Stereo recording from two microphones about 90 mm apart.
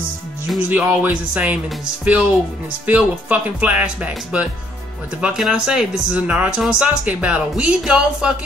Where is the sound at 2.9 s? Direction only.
15° right (ahead or behind).